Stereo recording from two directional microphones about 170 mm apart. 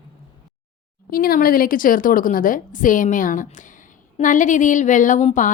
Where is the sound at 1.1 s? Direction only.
60° left (ahead or behind).